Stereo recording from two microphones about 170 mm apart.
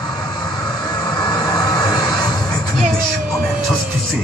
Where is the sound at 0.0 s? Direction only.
25° left (ahead or behind).